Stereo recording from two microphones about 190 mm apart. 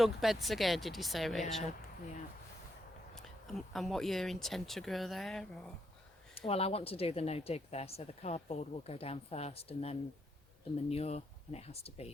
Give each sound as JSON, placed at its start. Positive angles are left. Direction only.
{"t": 0.0, "sound": "speech", "side_deg": 0}
{"t": 3.2, "sound": "speech", "side_deg": 0}
{"t": 6.3, "sound": "speech", "side_deg": 30}